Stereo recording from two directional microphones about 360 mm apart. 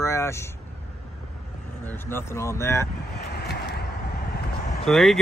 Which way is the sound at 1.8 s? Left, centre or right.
Centre.